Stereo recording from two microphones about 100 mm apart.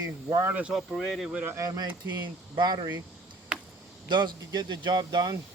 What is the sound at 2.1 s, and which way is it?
Speech, 45° right (ahead or behind).